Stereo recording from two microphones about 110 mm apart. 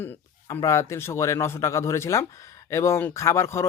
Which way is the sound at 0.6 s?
25° left (ahead or behind).